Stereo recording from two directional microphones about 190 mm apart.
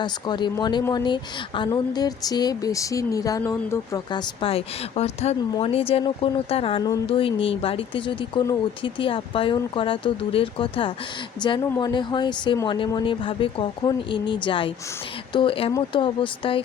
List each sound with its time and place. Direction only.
0.0 s a woman's voice: 25° left (ahead or behind)